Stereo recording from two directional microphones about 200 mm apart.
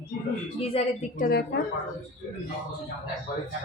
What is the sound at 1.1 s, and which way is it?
Speech, 50° left (ahead or behind).